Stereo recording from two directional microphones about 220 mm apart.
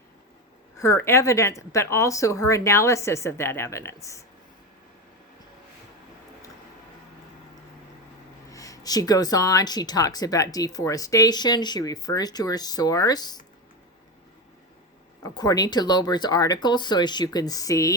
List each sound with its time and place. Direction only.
0.8 s speech: 10° left (ahead or behind)
8.4 s speech: 15° left (ahead or behind)
15.2 s speech: 15° left (ahead or behind)